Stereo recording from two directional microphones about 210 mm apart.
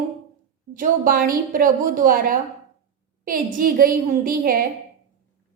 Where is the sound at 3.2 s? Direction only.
40° right (ahead or behind).